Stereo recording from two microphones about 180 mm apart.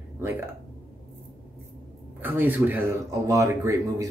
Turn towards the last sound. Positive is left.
turn(degrees=-15)  # may be behind; listen again after turning